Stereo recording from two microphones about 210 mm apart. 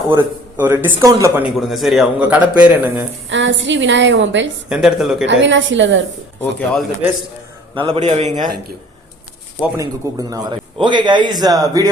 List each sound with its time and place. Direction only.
0.1 s a man's voice: 10° right (ahead or behind)
1.5 s a man's voice: centre (ahead or behind)
3.2 s a woman's voice: 60° right (ahead or behind)
4.7 s speech: centre (ahead or behind)
5.2 s a woman's voice: 60° right (ahead or behind)
6.4 s speech: 5° left (ahead or behind)
7.8 s a man's voice: 30° right (ahead or behind)
9.7 s a man's voice: 15° right (ahead or behind)